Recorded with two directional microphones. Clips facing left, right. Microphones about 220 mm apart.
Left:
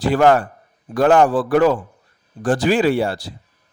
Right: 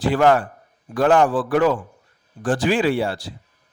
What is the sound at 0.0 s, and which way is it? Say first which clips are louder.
A man's voice: left 2 dB; 40° left (ahead or behind).